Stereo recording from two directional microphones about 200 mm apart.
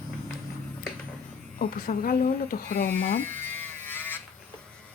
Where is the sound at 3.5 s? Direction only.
10° left (ahead or behind).